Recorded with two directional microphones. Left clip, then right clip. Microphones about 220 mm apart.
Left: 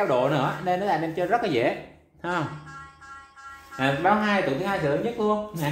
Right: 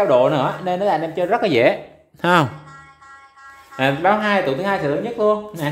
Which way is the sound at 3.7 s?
50° right (ahead or behind).